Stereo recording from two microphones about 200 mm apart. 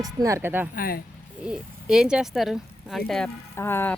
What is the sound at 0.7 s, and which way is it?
Speech, 45° left (ahead or behind).